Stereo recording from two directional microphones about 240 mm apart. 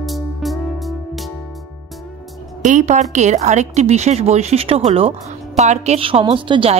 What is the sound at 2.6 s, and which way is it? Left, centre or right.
A woman's voice, right.